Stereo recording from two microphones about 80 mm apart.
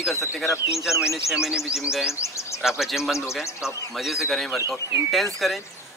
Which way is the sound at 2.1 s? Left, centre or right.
Left.